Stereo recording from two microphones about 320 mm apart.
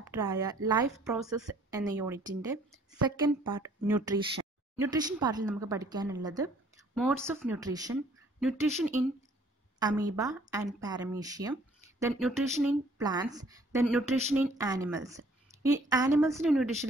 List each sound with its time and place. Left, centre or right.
0.0 s a woman's voice: centre